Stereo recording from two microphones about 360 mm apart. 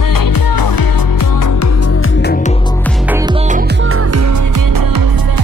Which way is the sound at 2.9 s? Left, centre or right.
Centre.